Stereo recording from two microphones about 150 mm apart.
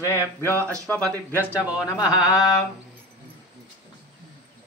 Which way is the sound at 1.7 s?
5° right (ahead or behind).